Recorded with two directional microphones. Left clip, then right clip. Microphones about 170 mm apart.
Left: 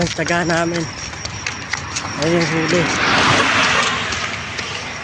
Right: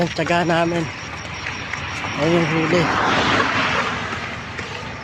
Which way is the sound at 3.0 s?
25° left (ahead or behind).